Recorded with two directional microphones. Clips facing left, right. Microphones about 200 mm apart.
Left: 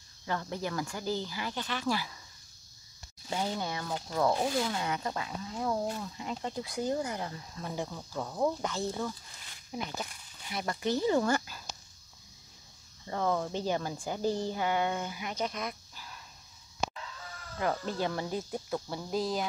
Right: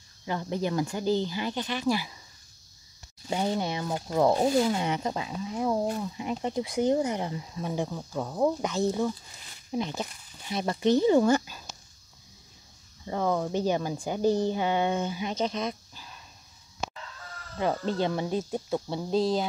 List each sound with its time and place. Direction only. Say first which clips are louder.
0.2 s speech: right 5 dB; 20° right (ahead or behind)
3.3 s speech: right 5 dB; 20° right (ahead or behind)
4.3 s speech: right 7 dB; 30° right (ahead or behind)
4.6 s speech: right 6 dB; 20° right (ahead or behind)
13.0 s speech: right 3 dB; 10° right (ahead or behind)
17.6 s speech: right 5 dB; 25° right (ahead or behind)